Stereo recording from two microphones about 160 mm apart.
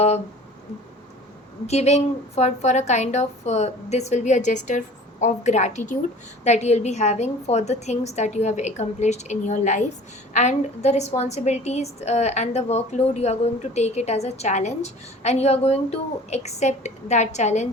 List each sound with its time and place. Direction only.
1.6 s a woman's voice: 45° left (ahead or behind)